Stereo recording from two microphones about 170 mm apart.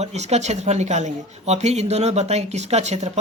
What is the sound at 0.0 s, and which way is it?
Speech, 40° right (ahead or behind).